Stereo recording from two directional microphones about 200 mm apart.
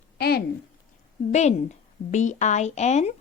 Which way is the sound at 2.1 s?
35° left (ahead or behind).